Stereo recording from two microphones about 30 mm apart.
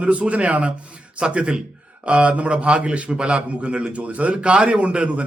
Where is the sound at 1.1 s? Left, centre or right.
Right.